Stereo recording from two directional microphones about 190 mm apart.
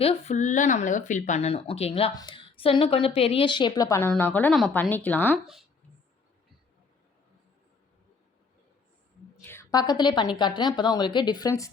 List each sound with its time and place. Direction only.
0.0 s a woman's voice: 35° left (ahead or behind); by 5.4 s 10° left (ahead or behind)
9.4 s a woman's voice: 15° left (ahead or behind)